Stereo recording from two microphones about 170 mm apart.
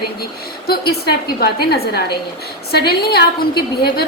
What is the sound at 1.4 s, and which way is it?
A woman's voice, 65° left (ahead or behind).